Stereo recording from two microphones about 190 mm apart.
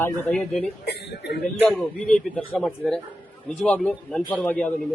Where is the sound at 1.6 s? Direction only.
5° left (ahead or behind).